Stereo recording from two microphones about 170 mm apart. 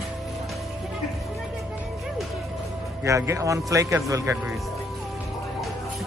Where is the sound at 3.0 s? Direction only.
15° right (ahead or behind).